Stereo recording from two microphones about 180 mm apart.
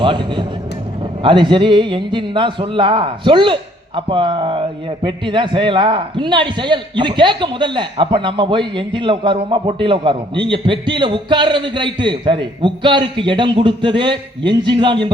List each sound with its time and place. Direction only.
0.0 s a man's voice: 25° right (ahead or behind)